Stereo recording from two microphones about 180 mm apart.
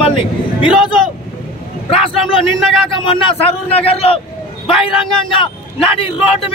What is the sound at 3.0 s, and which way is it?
A man's voice, 30° left (ahead or behind).